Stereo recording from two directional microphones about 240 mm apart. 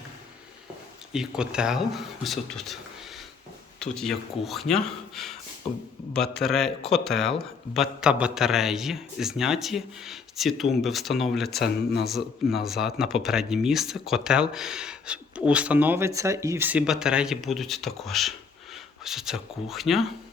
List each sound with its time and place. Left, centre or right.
1.1 s speech: centre
3.8 s speech: centre
11.5 s speech: left
12.0 s speech: centre